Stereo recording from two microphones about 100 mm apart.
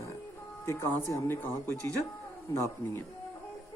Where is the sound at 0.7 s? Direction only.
25° left (ahead or behind).